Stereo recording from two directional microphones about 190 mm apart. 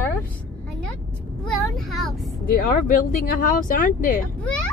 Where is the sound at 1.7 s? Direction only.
Centre (ahead or behind).